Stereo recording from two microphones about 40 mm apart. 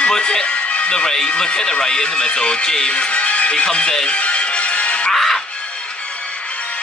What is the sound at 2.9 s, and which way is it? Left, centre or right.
Speech, left.